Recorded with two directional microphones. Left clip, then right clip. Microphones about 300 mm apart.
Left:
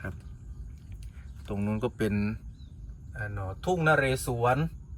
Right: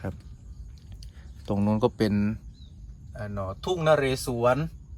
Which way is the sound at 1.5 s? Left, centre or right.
Centre.